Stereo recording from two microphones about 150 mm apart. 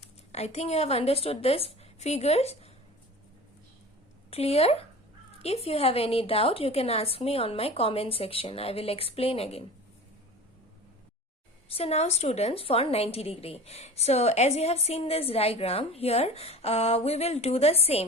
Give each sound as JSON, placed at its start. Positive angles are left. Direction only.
{"t": 0.3, "sound": "a woman's voice", "side_deg": 45}
{"t": 4.3, "sound": "a woman's voice", "side_deg": 45}
{"t": 11.7, "sound": "a woman's voice", "side_deg": 40}